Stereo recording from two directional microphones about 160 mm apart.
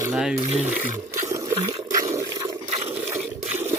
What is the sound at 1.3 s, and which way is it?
Toilet flush, 20° right (ahead or behind).